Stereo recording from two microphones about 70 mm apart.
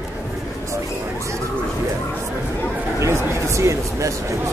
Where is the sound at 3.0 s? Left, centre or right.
Right.